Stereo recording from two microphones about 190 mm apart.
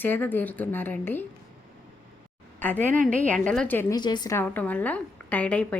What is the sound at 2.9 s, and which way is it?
Speech, 45° right (ahead or behind).